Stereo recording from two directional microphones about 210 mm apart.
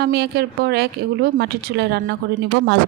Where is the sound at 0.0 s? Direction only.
50° right (ahead or behind).